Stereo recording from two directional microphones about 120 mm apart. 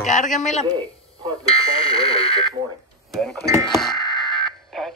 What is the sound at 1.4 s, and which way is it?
Fire alarm, 50° left (ahead or behind).